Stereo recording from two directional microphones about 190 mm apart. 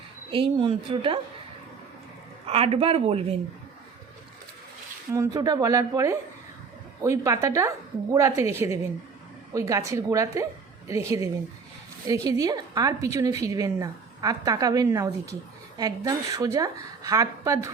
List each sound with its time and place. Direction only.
0.3 s a woman's voice: 30° right (ahead or behind)
2.5 s speech: 30° right (ahead or behind)
5.1 s a woman's voice: 15° right (ahead or behind)